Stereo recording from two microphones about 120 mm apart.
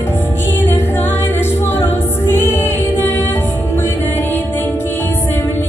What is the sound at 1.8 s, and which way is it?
Music, 20° left (ahead or behind).